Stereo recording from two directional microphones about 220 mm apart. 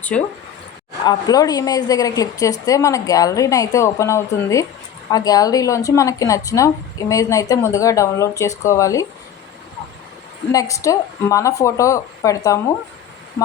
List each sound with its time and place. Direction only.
0.1 s speech: 5° left (ahead or behind)
1.0 s speech: 15° left (ahead or behind)
10.5 s speech: 15° left (ahead or behind)